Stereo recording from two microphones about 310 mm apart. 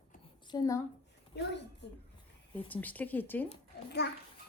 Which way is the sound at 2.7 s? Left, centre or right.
Centre.